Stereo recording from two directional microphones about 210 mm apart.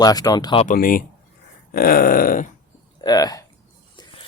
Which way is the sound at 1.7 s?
45° left (ahead or behind).